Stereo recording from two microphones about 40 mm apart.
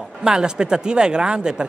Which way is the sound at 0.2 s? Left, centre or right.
Centre.